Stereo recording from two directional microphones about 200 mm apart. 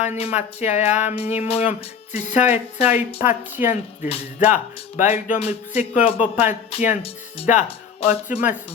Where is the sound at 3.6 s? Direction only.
10° right (ahead or behind).